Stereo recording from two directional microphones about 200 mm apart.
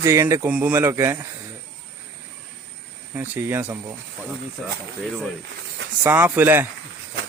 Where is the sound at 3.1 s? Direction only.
10° right (ahead or behind).